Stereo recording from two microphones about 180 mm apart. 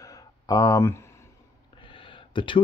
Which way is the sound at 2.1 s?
30° left (ahead or behind).